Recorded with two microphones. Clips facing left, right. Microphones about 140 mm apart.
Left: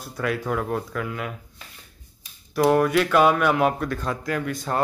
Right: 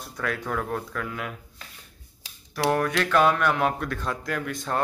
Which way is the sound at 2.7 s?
5° left (ahead or behind).